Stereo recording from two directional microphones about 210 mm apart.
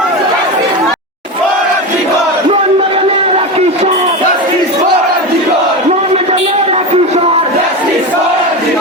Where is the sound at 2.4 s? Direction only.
25° right (ahead or behind).